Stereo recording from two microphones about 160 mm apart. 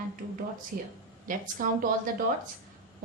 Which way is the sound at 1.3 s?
60° right (ahead or behind).